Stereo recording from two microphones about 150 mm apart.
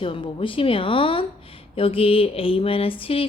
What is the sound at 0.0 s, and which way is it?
Speech, 35° left (ahead or behind).